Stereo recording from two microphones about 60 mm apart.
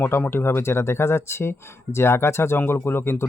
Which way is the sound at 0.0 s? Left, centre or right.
Left.